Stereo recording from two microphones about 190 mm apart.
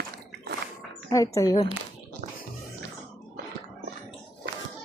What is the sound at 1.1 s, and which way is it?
Speech, 15° left (ahead or behind).